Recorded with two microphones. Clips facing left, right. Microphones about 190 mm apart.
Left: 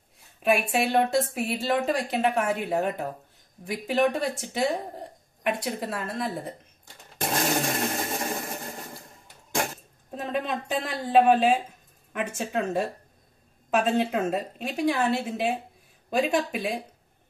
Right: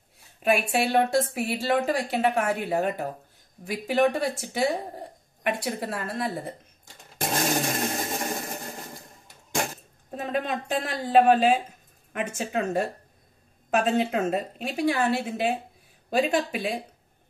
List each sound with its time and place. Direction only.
0.4 s speech: centre (ahead or behind)
7.3 s a sound: 20° right (ahead or behind)
10.1 s speech: 5° right (ahead or behind)